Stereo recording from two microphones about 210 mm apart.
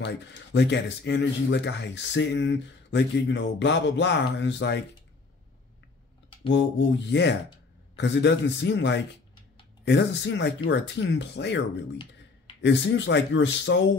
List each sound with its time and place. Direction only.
0.0 s speech: 55° left (ahead or behind)
6.5 s speech: 55° left (ahead or behind)